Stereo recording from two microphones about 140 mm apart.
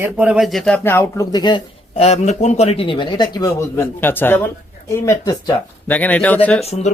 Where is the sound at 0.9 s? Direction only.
15° left (ahead or behind).